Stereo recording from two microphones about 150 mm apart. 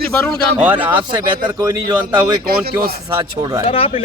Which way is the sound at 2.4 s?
90° right.